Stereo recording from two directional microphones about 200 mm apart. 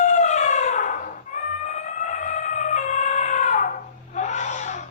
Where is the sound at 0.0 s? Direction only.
35° left (ahead or behind).